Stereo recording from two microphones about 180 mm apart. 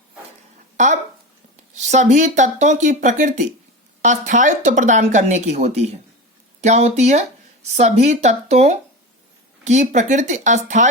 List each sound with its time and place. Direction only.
1.7 s speech: 40° right (ahead or behind)